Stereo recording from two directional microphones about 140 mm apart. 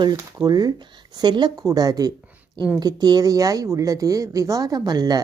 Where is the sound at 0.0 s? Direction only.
30° right (ahead or behind).